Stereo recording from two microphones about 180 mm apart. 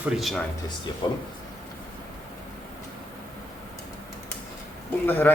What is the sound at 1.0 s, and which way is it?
Speech, 25° left (ahead or behind).